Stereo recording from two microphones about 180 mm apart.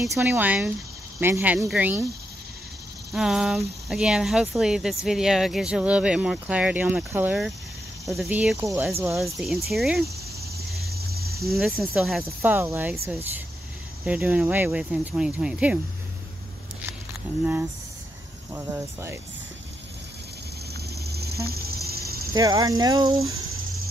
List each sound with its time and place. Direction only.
0.0 s speech: 15° right (ahead or behind)
3.1 s speech: centre (ahead or behind)
9.2 s speech: centre (ahead or behind)
10.8 s cricket: 60° right (ahead or behind)
11.4 s speech: centre (ahead or behind)
12.4 s speech: 10° right (ahead or behind)
18.5 s speech: 10° right (ahead or behind)
21.0 s a sound: 65° right (ahead or behind)
22.3 s speech: 20° right (ahead or behind)